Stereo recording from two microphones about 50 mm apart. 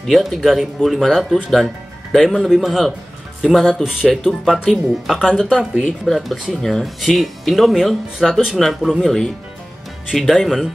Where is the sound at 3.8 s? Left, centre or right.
Centre.